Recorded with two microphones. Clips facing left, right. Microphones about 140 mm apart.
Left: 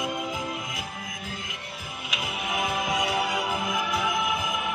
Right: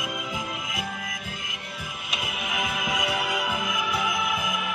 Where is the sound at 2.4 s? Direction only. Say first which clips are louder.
Left 3 dB; 30° left (ahead or behind).